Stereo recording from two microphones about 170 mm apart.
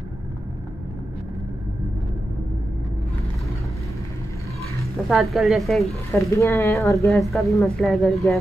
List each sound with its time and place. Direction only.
5.0 s a woman's voice: centre (ahead or behind)
6.1 s speech: 15° left (ahead or behind)
7.1 s a woman's voice: centre (ahead or behind)